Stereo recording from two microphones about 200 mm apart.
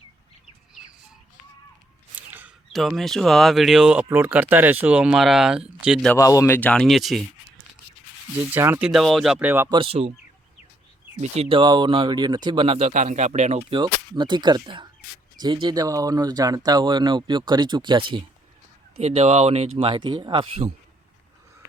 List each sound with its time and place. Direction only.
2.1 s speech: 10° right (ahead or behind)
6.1 s speech: 15° left (ahead or behind); by 7.3 s centre (ahead or behind)
8.5 s speech: 10° right (ahead or behind)
8.9 s speech: centre (ahead or behind)
9.7 s speech: 30° right (ahead or behind)
11.2 s speech: 30° right (ahead or behind)